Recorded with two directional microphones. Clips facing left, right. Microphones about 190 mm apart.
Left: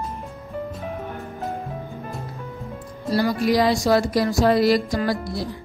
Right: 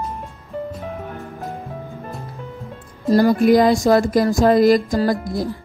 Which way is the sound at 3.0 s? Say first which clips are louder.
Right 7 dB; 45° right (ahead or behind).